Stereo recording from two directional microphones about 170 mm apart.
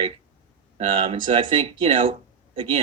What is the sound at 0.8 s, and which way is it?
Speech, 35° right (ahead or behind).